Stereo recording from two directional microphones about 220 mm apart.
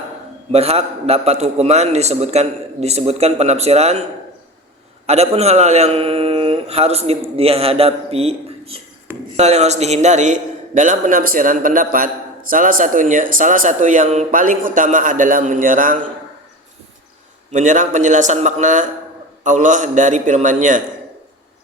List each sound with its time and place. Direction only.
0.5 s a man's voice: 30° right (ahead or behind)
5.0 s a man's voice: 30° right (ahead or behind)
17.5 s a man's voice: 35° right (ahead or behind)